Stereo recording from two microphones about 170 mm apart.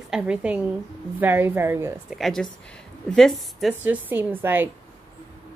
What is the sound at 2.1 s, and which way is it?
A woman's voice, centre (ahead or behind).